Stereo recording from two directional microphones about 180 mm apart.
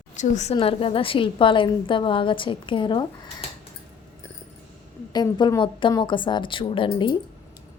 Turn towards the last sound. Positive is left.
turn(degrees=25)  # may be behind; listen again after turning